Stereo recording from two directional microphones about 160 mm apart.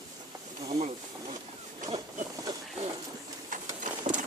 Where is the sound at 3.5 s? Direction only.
55° right (ahead or behind).